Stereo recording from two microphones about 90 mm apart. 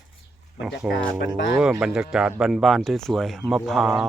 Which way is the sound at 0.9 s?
10° right (ahead or behind).